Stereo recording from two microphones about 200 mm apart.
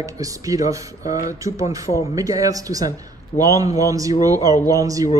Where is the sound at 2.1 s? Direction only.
15° right (ahead or behind).